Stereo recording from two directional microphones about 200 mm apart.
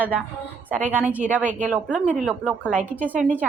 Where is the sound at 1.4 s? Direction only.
40° right (ahead or behind).